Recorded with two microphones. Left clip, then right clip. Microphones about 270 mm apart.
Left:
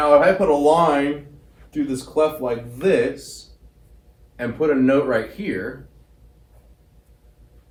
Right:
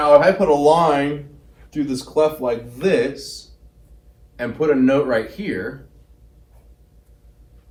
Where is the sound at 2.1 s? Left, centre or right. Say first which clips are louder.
Right 2 dB; right.